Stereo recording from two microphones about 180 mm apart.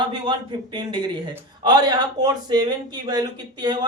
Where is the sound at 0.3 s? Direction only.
25° right (ahead or behind).